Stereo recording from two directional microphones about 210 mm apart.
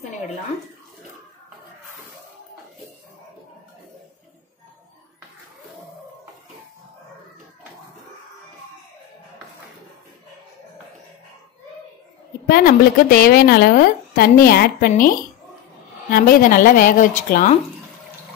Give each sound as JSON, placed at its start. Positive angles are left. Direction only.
{"t": 12.4, "sound": "a woman's voice", "side_deg": 45}